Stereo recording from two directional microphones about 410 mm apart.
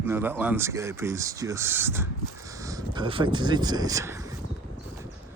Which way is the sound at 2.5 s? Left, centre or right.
Centre.